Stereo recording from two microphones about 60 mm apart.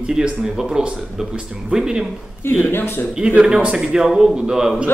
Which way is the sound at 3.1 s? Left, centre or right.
Centre.